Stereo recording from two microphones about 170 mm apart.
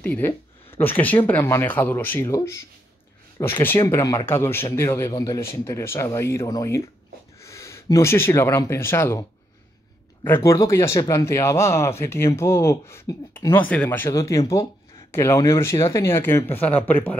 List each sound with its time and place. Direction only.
0.0 s speech: 10° left (ahead or behind)
10.2 s speech: 15° left (ahead or behind)